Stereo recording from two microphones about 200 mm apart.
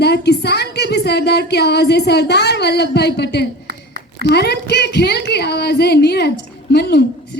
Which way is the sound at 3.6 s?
50° right (ahead or behind).